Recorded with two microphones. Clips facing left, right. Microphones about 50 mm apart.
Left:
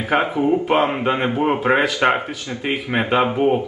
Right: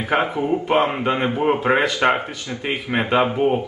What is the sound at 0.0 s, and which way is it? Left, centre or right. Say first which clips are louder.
Speech: left 2 dB; centre.